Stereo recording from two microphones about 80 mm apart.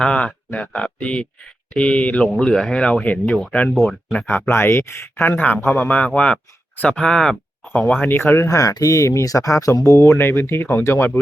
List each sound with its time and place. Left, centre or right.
0.0 s speech: centre
3.8 s speech: centre
4.3 s speech: left; by 7.9 s centre
8.0 s speech: left
8.4 s speech: left